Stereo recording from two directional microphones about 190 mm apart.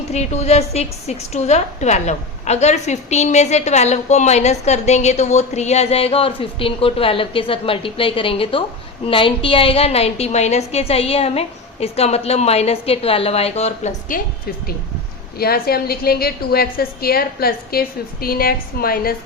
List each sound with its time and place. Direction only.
0.1 s a woman's voice: 35° left (ahead or behind)
15.4 s a woman's voice: 55° left (ahead or behind)